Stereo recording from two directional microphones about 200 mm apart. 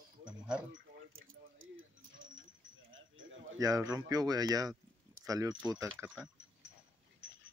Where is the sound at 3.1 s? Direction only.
75° right (ahead or behind).